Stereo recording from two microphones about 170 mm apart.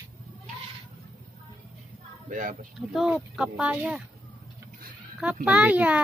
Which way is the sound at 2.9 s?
5° right (ahead or behind).